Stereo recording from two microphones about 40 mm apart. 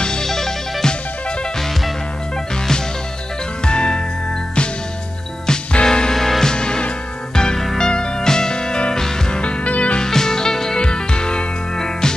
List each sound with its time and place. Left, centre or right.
0.0 s music: centre
3.6 s music: left
5.5 s music: left
5.9 s music: centre; by 9.9 s left
9.9 s music: centre